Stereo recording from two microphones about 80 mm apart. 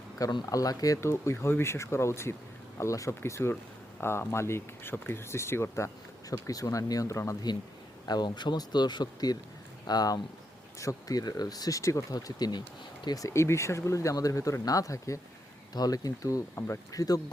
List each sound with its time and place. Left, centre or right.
0.2 s speech: left
1.0 s speech: left
6.3 s speech: left
8.0 s speech: left
13.1 s speech: left
16.6 s speech: left
16.9 s speech: left